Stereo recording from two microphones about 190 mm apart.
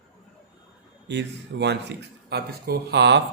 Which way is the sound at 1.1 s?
65° right (ahead or behind).